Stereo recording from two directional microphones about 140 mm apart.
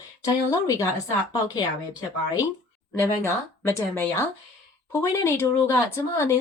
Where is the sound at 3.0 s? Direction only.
20° left (ahead or behind).